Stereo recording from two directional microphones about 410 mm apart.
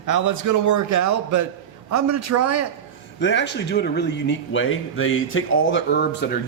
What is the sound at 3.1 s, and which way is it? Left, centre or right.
Speech, left.